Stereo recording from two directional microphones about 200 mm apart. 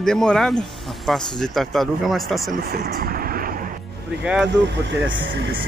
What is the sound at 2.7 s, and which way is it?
Vehicle, 50° right (ahead or behind).